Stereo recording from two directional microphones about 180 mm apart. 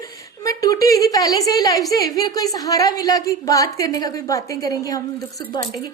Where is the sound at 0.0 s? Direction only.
20° left (ahead or behind).